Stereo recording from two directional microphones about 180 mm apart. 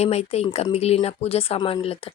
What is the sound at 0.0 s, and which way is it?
Speech, 35° left (ahead or behind).